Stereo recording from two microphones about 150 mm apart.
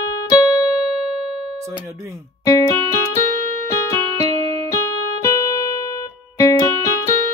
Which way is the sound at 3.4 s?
55° right (ahead or behind).